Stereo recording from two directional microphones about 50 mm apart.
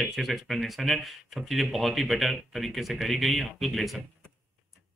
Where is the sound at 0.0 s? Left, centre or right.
Centre.